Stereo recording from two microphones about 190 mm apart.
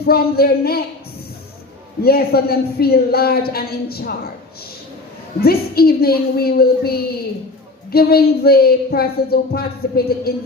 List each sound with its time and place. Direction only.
0.0 s speech: 55° left (ahead or behind)
2.0 s a woman's voice: 55° left (ahead or behind)
5.4 s a woman's voice: 55° left (ahead or behind)